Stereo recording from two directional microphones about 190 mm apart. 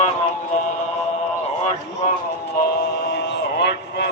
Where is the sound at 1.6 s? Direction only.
35° left (ahead or behind).